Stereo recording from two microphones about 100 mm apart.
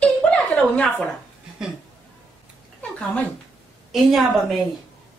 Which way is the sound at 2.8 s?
15° left (ahead or behind).